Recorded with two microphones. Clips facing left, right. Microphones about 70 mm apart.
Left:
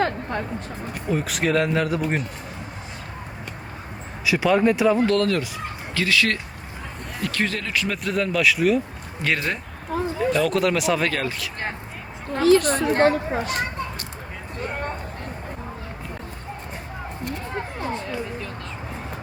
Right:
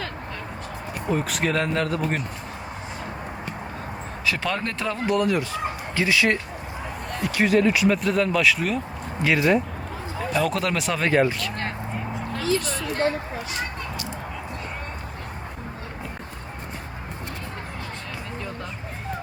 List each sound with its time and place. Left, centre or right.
0.0 s music: left
1.0 s speech: centre
4.3 s speech: centre
5.0 s speech: centre
8.0 s speech: centre
11.1 s speech: right
12.4 s a sound: left
12.8 s a sound: left